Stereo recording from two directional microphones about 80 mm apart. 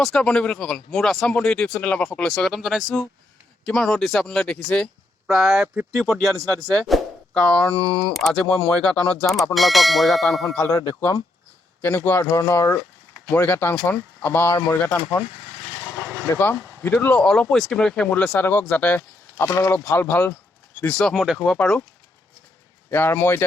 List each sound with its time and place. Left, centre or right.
0.0 s speech: centre
2.1 s speech: centre
5.3 s speech: centre
10.7 s speech: left
11.8 s speech: left
12.4 s speech: left
16.3 s speech: left
17.5 s speech: centre
19.4 s speech: left
19.9 s speech: left
21.0 s speech: centre
22.9 s speech: left